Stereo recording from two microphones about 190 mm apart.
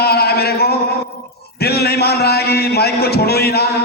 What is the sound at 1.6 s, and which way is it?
A man's voice, 55° left (ahead or behind).